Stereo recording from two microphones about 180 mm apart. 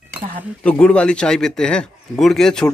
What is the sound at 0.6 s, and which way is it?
Speech, 5° left (ahead or behind).